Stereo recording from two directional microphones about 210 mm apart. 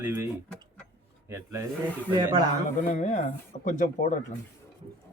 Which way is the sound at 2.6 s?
35° left (ahead or behind).